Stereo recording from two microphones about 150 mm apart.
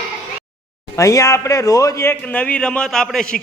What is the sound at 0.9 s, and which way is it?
Speech, 20° left (ahead or behind).